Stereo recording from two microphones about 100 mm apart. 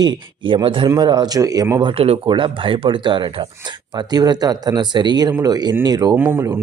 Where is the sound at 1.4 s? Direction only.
35° right (ahead or behind).